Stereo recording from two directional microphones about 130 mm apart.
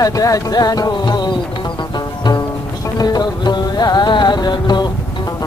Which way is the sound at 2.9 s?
30° left (ahead or behind).